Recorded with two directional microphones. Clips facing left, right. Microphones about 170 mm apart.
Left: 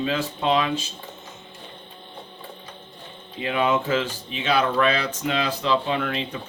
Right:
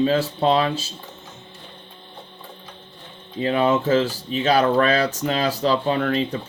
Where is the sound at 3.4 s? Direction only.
40° right (ahead or behind).